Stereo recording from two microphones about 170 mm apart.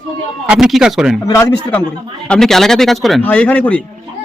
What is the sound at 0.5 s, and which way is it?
Speech, 5° right (ahead or behind).